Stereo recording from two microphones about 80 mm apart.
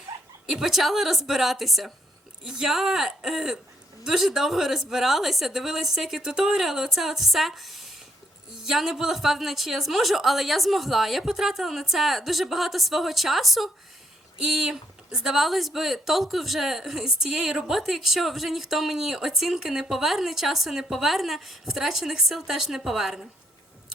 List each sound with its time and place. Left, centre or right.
0.1 s dog: right
0.4 s speech: centre